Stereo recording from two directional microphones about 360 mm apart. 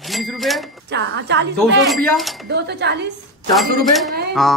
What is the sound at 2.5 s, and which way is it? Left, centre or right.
Speech, right.